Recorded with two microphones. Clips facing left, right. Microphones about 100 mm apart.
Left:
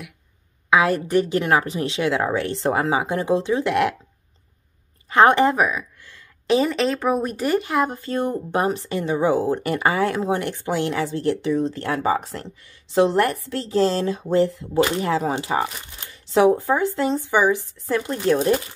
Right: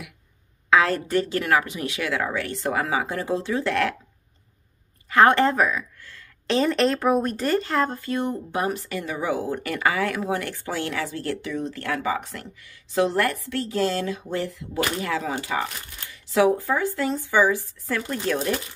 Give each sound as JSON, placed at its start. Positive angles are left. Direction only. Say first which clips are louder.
{"t": 0.7, "sound": "speech", "louder": "left 2 dB", "side_deg": 15}
{"t": 5.1, "sound": "speech", "louder": "left 2 dB", "side_deg": 20}
{"t": 8.0, "sound": "speech", "louder": "left 3 dB", "side_deg": 35}